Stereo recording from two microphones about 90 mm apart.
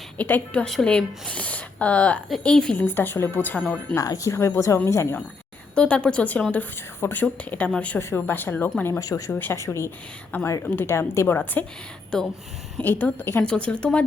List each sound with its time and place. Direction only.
0.2 s speech: 15° left (ahead or behind)
0.6 s speech: 5° left (ahead or behind)
2.8 s a woman's voice: 25° left (ahead or behind)
3.9 s speech: 40° left (ahead or behind)
5.7 s a woman's voice: 10° left (ahead or behind)
8.8 s speech: 35° left (ahead or behind)
9.3 s a woman's voice: 25° left (ahead or behind)
10.3 s speech: 20° left (ahead or behind)
10.8 s a woman's voice: 30° left (ahead or behind)
12.8 s a woman's voice: 20° left (ahead or behind)
13.4 s speech: 10° left (ahead or behind)